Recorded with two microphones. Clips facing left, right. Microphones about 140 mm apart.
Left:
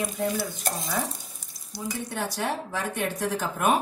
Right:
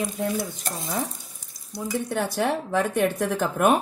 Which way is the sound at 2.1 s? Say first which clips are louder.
Right 5 dB; 55° right (ahead or behind).